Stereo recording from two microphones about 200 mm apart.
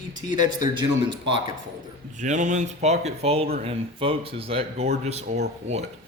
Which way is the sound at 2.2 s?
40° right (ahead or behind).